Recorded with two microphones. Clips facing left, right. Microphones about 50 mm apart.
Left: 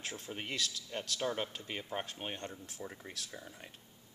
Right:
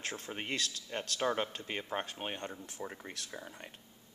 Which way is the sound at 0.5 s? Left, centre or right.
Right.